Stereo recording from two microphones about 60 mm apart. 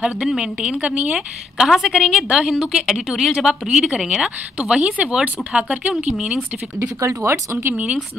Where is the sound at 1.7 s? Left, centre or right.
Centre; by 6.0 s right.